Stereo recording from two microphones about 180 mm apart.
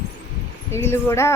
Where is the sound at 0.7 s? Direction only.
15° left (ahead or behind).